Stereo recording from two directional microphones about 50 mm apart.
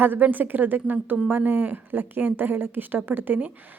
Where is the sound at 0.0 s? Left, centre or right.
Right.